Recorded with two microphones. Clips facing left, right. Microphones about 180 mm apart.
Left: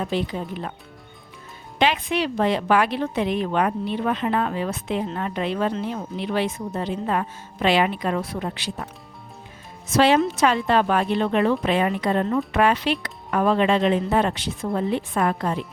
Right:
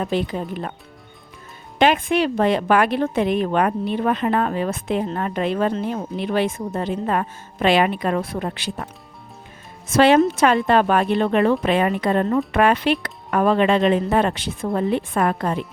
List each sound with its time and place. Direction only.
0.0 s a woman's voice: 55° right (ahead or behind)
1.8 s a woman's voice: 50° right (ahead or behind)
9.9 s speech: 55° right (ahead or behind)